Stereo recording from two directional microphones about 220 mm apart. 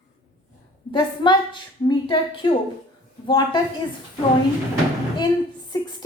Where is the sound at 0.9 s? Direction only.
20° left (ahead or behind).